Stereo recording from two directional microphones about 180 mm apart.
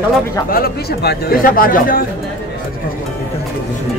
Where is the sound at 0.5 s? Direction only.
55° left (ahead or behind).